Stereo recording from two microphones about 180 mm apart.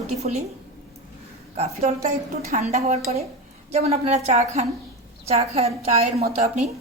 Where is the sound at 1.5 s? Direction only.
35° right (ahead or behind).